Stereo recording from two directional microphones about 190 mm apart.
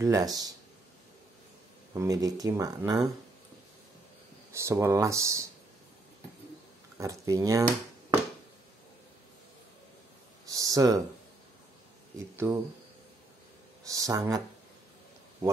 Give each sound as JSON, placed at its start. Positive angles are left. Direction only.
{"t": 0.0, "sound": "speech", "side_deg": -15}
{"t": 2.0, "sound": "speech", "side_deg": -20}
{"t": 4.5, "sound": "speech", "side_deg": -15}
{"t": 7.0, "sound": "speech", "side_deg": -15}
{"t": 10.4, "sound": "a sound", "side_deg": -20}
{"t": 12.4, "sound": "speech", "side_deg": -10}
{"t": 13.8, "sound": "speech", "side_deg": -20}